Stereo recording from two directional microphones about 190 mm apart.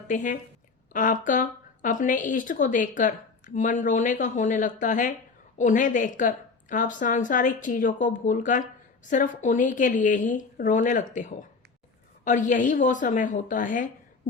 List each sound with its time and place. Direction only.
0.1 s a woman's voice: 45° left (ahead or behind)